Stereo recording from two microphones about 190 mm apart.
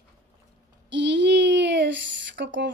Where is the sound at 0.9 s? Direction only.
70° right (ahead or behind).